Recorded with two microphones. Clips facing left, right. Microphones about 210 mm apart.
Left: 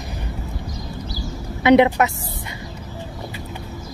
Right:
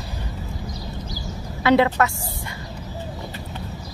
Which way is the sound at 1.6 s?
20° left (ahead or behind).